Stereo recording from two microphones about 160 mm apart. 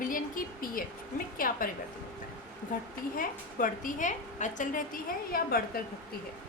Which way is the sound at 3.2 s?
60° left (ahead or behind).